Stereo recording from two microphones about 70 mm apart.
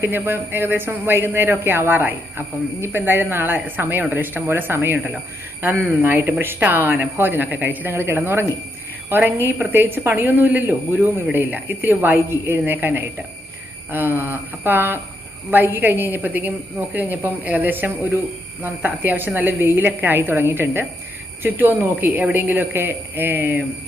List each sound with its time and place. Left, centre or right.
0.0 s a man's voice: right